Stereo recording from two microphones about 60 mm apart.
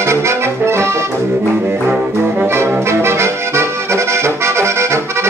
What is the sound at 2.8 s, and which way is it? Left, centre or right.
Accordion, right.